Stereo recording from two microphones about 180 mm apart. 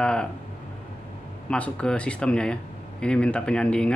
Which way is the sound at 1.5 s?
5° left (ahead or behind).